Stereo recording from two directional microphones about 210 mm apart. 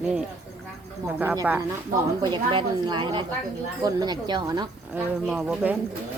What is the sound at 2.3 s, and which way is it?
A woman's voice, 25° right (ahead or behind).